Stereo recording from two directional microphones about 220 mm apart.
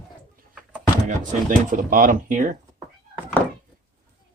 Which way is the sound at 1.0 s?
35° right (ahead or behind).